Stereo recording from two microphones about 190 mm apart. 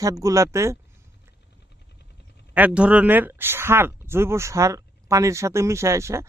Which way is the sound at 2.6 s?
5° right (ahead or behind).